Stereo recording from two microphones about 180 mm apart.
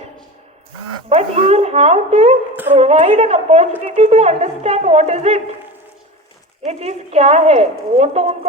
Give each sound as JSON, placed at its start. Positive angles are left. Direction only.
{"t": 1.1, "sound": "a woman's voice", "side_deg": -35}
{"t": 6.7, "sound": "a woman's voice", "side_deg": -35}